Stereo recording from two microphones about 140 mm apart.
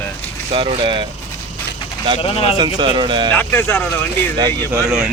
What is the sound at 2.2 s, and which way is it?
Speech, 45° left (ahead or behind).